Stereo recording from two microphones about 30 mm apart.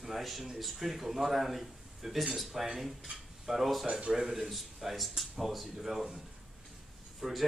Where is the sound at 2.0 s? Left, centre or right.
Centre.